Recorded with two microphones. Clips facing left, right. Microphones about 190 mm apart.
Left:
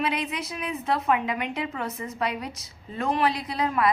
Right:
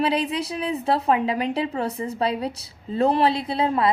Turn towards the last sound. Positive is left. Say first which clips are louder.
# right 3 dB
turn(degrees=-30)  # may be behind; listen again after turning